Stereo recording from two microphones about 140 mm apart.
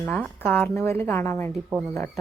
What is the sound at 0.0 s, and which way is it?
Speech, 10° left (ahead or behind).